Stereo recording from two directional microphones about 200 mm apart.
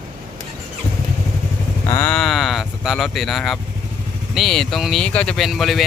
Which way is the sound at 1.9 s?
10° left (ahead or behind).